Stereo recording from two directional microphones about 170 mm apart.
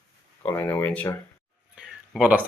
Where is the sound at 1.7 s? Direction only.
5° right (ahead or behind).